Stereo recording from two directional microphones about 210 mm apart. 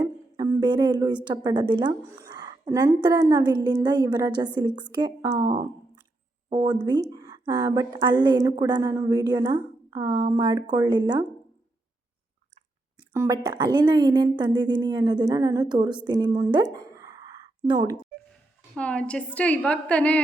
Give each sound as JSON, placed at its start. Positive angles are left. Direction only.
{"t": 0.0, "sound": "a woman's voice", "side_deg": -15}
{"t": 13.1, "sound": "a woman's voice", "side_deg": -15}
{"t": 18.7, "sound": "a woman's voice", "side_deg": 5}